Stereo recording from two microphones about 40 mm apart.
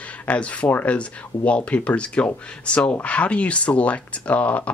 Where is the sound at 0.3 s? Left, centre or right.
Left.